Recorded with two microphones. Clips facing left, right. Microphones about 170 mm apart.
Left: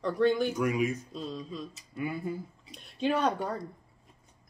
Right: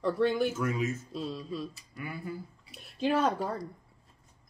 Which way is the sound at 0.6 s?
15° left (ahead or behind).